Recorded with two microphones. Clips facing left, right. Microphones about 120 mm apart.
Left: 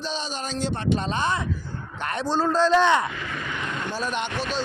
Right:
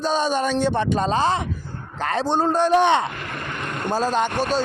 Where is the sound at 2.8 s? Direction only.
25° right (ahead or behind).